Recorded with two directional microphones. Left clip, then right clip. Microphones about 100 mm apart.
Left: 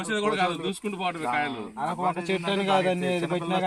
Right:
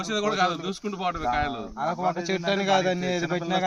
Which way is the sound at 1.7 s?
15° right (ahead or behind).